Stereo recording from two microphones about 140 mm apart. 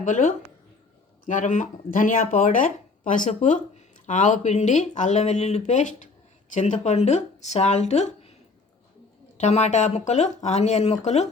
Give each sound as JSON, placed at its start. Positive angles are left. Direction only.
{"t": 0.0, "sound": "speech", "side_deg": 65}
{"t": 9.4, "sound": "speech", "side_deg": 55}